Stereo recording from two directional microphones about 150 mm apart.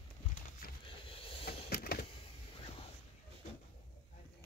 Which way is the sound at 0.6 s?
80° left.